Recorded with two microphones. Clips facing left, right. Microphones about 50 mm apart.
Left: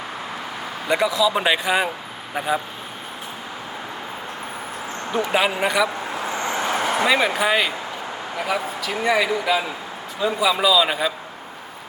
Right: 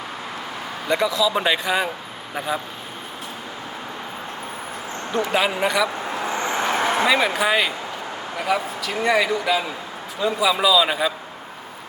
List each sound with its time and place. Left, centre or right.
0.9 s speech: centre
5.1 s speech: centre
6.2 s vehicle: right
7.0 s speech: centre